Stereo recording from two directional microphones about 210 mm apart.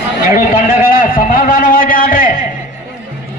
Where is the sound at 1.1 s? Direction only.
40° left (ahead or behind).